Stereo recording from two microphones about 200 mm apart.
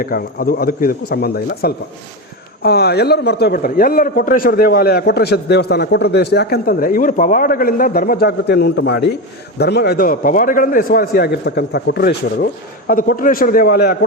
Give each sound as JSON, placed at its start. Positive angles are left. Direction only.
{"t": 0.0, "sound": "speech", "side_deg": 45}